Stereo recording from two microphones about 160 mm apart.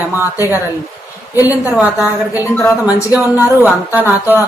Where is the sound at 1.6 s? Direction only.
10° right (ahead or behind).